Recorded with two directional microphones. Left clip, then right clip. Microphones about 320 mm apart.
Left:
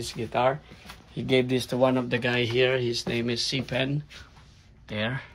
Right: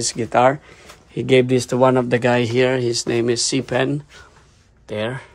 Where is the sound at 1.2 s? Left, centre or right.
Right.